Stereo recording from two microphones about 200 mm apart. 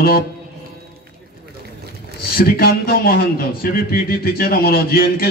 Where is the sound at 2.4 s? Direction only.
50° left (ahead or behind).